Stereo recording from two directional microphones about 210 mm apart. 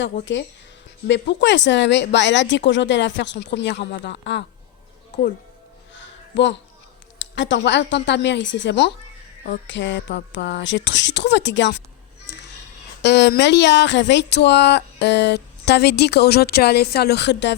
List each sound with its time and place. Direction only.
1.0 s speech: 55° left (ahead or behind)
5.9 s a sound: 60° left (ahead or behind)
7.2 s speech: 60° left (ahead or behind)
13.0 s speech: 50° left (ahead or behind)